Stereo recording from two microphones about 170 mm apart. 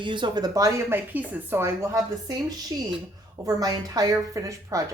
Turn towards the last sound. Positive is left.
turn(degrees=-20)  # may be behind; listen again after turning